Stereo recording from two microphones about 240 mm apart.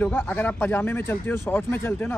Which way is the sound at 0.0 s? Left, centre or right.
Centre.